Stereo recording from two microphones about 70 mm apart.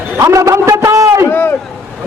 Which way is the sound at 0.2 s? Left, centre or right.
Right.